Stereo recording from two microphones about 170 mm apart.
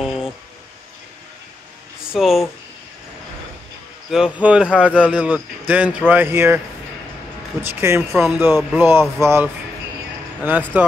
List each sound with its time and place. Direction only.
0.0 s a sound: 5° right (ahead or behind)
2.1 s speech: centre (ahead or behind)
4.1 s speech: 5° right (ahead or behind)
7.6 s speech: 15° right (ahead or behind)